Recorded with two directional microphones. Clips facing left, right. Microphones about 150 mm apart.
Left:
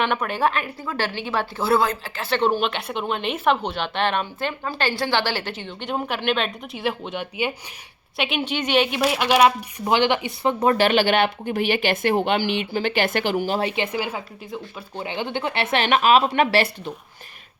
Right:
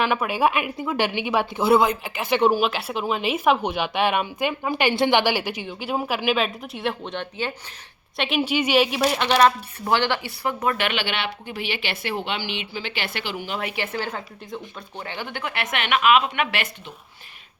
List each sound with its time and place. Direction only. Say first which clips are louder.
0.0 s a woman's voice: right 1 dB; 5° right (ahead or behind); by 10.5 s 20° left (ahead or behind)
10.6 s speech: left 8 dB; 35° left (ahead or behind)
13.8 s speech: left 2 dB; 10° left (ahead or behind); by 16.9 s 35° left (ahead or behind)